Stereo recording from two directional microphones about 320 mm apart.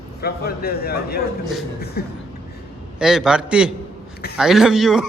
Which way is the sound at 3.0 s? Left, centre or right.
Centre.